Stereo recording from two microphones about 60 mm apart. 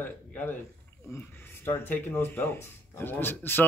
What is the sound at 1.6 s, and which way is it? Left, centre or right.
A man's voice, left.